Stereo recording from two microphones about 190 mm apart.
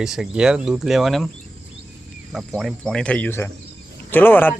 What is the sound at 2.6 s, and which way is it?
Speech, centre (ahead or behind).